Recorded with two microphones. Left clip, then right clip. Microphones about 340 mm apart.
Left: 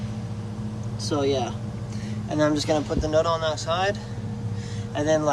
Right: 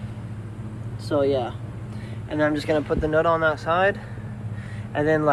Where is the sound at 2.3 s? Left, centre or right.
Centre.